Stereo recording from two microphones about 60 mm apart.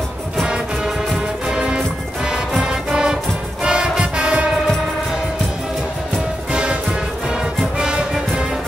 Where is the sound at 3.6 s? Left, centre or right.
Centre.